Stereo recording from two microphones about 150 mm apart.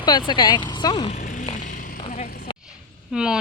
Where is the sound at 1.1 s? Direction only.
60° left (ahead or behind).